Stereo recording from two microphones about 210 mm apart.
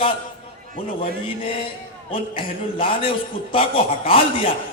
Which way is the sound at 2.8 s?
25° left (ahead or behind).